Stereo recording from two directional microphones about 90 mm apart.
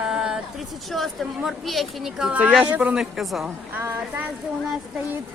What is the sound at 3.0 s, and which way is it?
Speech, centre (ahead or behind).